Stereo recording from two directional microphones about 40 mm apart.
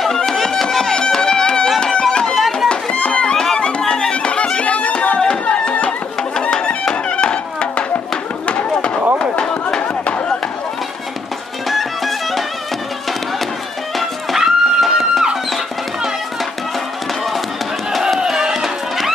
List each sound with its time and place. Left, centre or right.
0.0 s music: centre
0.9 s music: centre
2.3 s music: centre
2.7 s music: left
5.5 s a sound: left
7.1 s music: left
8.5 s a sound: left
11.7 s music: centre
13.9 s music: centre
18.3 s music: centre